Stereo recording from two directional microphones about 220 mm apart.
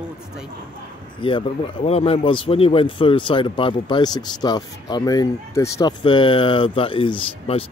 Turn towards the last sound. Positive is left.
turn(degrees=25)  # may be behind; listen again after turning